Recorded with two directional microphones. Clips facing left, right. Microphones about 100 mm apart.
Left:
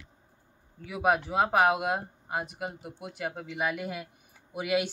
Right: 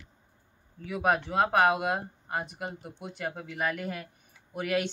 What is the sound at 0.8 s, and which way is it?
Speech, 5° left (ahead or behind).